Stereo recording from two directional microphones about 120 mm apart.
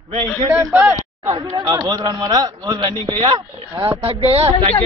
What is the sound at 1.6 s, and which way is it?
A man's voice, 35° right (ahead or behind).